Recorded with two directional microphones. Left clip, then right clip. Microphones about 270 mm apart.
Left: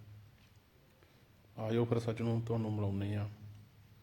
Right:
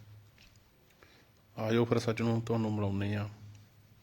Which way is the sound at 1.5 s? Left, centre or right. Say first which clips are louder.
Right 5 dB; right.